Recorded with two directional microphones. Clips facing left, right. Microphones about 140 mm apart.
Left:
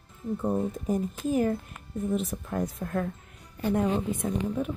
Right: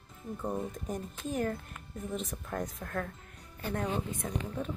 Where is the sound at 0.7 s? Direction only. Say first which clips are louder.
Left 9 dB; 5° left (ahead or behind).